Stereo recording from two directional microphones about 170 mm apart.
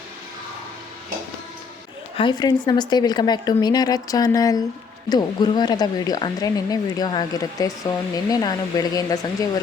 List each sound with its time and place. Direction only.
2.1 s speech: 25° left (ahead or behind)